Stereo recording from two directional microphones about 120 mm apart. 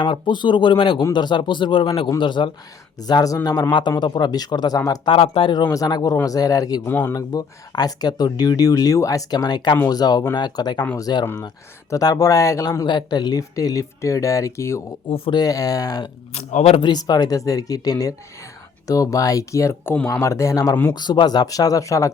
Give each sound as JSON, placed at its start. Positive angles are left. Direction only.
{"t": 0.0, "sound": "speech", "side_deg": 40}
{"t": 5.0, "sound": "speech", "side_deg": 55}
{"t": 5.7, "sound": "speech", "side_deg": 30}
{"t": 6.8, "sound": "speech", "side_deg": 15}
{"t": 7.1, "sound": "speech", "side_deg": 30}
{"t": 15.0, "sound": "speech", "side_deg": 50}
{"t": 15.4, "sound": "speech", "side_deg": 30}
{"t": 16.3, "sound": "a man's voice", "side_deg": 75}
{"t": 16.7, "sound": "speech", "side_deg": 40}
{"t": 20.9, "sound": "speech", "side_deg": 35}